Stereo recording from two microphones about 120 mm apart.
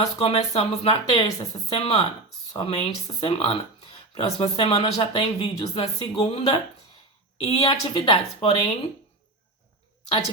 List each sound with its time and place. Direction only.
0.2 s speech: 60° left (ahead or behind)